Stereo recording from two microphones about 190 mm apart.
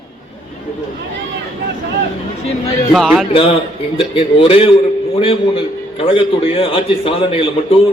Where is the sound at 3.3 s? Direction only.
30° left (ahead or behind).